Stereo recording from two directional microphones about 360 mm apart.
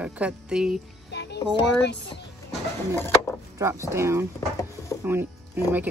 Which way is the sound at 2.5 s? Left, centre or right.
Centre.